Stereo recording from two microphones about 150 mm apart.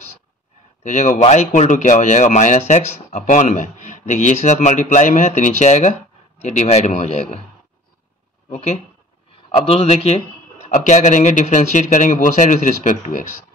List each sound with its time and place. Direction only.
0.8 s a man's voice: 55° left (ahead or behind)
9.7 s speech: 40° left (ahead or behind)
10.7 s a man's voice: 55° left (ahead or behind)